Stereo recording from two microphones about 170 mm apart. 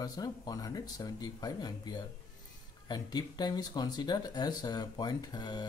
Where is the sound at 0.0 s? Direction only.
20° left (ahead or behind).